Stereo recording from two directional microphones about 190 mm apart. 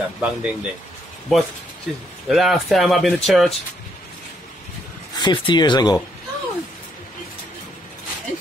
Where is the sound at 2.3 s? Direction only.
Centre (ahead or behind).